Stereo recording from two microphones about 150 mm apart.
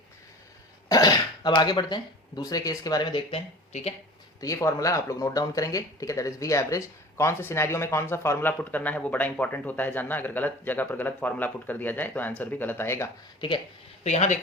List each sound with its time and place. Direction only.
0.9 s speech: 25° left (ahead or behind)
3.7 s speech: 45° left (ahead or behind)
4.4 s speech: 20° left (ahead or behind)
14.0 s speech: 50° left (ahead or behind)